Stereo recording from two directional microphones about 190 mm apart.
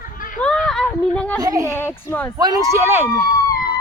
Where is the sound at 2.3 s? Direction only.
20° right (ahead or behind).